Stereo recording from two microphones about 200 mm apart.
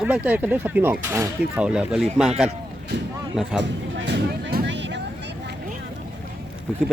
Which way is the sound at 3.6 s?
60° right (ahead or behind).